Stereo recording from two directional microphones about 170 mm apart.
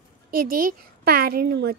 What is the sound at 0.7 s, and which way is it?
A woman's voice, 65° right (ahead or behind).